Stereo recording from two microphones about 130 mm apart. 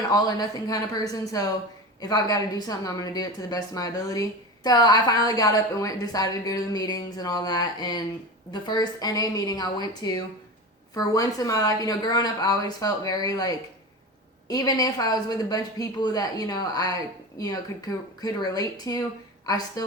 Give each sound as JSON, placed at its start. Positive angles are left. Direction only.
{"t": 0.1, "sound": "a woman's voice", "side_deg": 30}